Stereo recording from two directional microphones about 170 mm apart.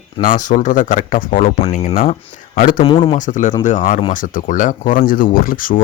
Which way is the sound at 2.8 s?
30° left (ahead or behind).